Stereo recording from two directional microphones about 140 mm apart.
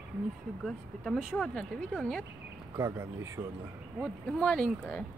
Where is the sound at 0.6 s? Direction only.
Centre (ahead or behind).